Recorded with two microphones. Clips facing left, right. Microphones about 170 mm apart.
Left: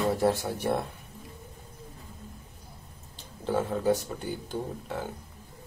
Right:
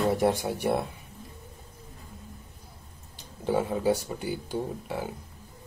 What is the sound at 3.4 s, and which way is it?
Speech, 10° right (ahead or behind).